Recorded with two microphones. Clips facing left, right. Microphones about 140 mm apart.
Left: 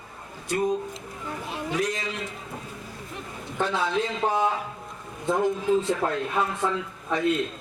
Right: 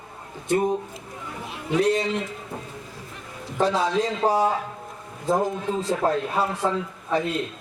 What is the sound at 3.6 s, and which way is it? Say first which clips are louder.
Speech: right 4 dB; 35° right (ahead or behind).